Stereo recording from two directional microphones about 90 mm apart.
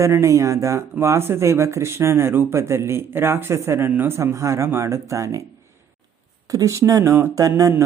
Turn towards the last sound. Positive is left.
turn(degrees=-35)  # may be behind; listen again after turning